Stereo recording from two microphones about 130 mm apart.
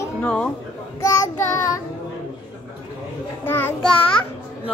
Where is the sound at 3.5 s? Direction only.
15° left (ahead or behind).